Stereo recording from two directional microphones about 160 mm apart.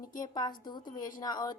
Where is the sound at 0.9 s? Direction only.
55° left (ahead or behind).